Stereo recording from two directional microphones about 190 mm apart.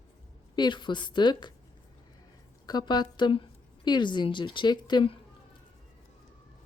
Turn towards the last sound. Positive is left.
turn(degrees=25)  # may be behind; listen again after turning